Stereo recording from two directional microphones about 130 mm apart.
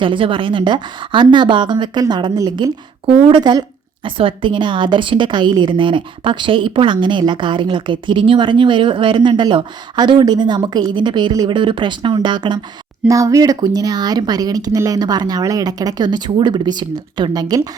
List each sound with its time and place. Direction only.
0.0 s a woman's voice: 40° right (ahead or behind)